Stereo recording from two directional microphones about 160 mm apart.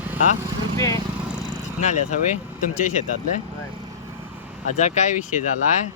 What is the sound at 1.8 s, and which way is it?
Speech, 50° left (ahead or behind).